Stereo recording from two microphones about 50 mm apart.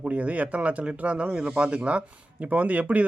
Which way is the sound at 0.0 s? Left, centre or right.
Right.